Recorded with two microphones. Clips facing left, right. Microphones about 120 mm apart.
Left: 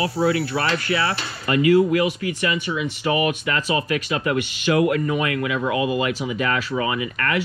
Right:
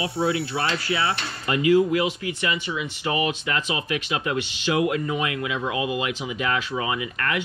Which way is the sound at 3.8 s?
15° right (ahead or behind).